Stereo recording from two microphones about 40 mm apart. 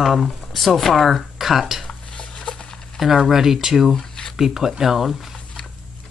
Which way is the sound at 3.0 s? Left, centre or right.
Centre.